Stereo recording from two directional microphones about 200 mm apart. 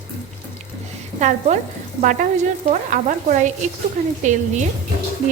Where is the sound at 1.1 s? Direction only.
35° right (ahead or behind).